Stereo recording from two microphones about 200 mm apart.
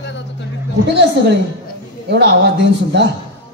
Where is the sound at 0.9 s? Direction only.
60° right (ahead or behind).